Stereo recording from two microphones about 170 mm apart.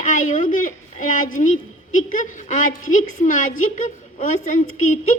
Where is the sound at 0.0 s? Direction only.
50° left (ahead or behind).